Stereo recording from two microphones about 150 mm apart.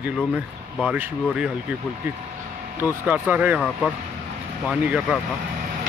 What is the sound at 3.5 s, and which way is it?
Speech, 10° left (ahead or behind).